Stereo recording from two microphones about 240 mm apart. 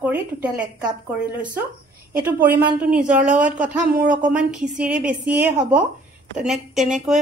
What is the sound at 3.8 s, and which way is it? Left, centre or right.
Speech, right.